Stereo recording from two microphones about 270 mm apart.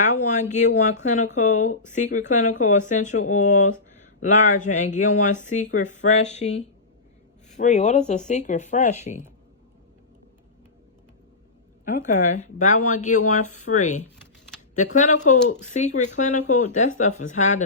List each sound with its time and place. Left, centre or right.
0.0 s speech: left
7.5 s speech: left
11.9 s speech: left
15.3 s speech: left